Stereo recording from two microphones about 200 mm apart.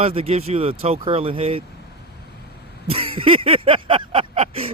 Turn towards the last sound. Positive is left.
turn(degrees=-30)  # may be behind; listen again after turning